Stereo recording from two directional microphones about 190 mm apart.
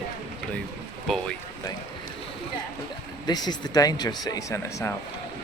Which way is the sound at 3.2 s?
20° left (ahead or behind).